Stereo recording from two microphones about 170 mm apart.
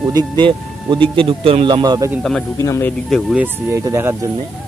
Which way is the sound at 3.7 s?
15° right (ahead or behind).